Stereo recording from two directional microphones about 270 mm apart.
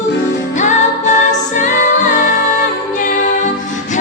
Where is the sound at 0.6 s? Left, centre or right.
Left.